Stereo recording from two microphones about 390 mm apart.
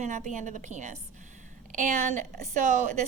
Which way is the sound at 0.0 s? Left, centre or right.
Centre.